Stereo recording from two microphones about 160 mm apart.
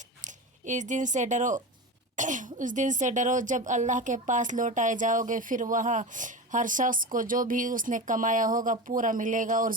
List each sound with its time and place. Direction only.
0.2 s speech: 50° right (ahead or behind)